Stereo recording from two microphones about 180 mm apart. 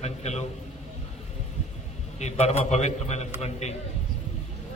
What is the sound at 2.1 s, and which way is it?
A man's voice, 35° left (ahead or behind).